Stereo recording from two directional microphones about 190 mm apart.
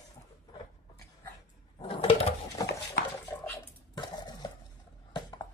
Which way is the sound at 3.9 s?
20° left (ahead or behind).